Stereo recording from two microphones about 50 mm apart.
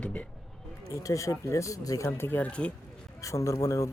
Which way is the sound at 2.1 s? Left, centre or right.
Left.